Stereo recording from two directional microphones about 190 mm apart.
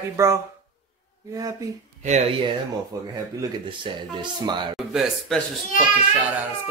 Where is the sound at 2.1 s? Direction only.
30° right (ahead or behind).